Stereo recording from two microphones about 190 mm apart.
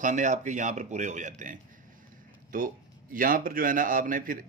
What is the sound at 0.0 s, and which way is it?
A man's voice, 40° right (ahead or behind).